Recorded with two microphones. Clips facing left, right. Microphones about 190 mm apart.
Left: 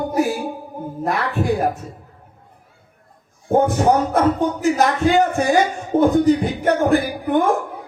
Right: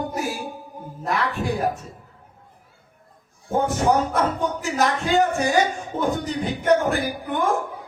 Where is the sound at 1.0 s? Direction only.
55° left (ahead or behind).